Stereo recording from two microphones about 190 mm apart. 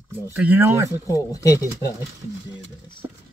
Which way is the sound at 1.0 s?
20° left (ahead or behind).